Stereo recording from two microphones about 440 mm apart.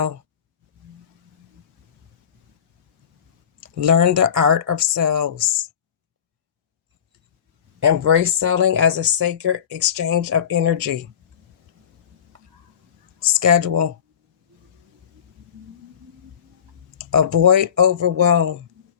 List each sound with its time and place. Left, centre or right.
3.6 s speech: right
8.0 s speech: right
13.3 s speech: right
17.0 s speech: right